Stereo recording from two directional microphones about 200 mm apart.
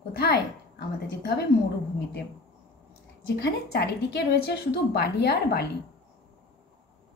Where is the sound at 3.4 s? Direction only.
55° left (ahead or behind).